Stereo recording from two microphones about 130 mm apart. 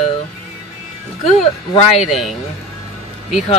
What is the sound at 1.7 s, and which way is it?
Speech, 55° left (ahead or behind).